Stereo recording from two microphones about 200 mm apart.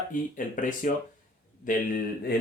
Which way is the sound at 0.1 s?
40° left (ahead or behind).